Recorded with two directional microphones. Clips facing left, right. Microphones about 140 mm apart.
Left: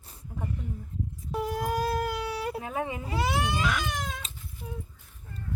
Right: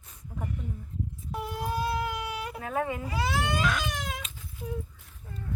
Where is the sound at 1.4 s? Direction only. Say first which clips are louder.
Left 3 dB; 40° left (ahead or behind).